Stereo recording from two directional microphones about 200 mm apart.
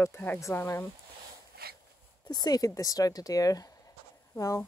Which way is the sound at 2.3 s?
20° left (ahead or behind).